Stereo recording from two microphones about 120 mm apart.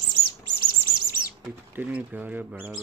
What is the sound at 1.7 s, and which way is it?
Speech, 15° right (ahead or behind).